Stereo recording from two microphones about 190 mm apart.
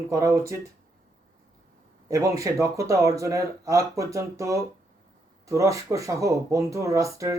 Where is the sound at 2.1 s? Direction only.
15° right (ahead or behind).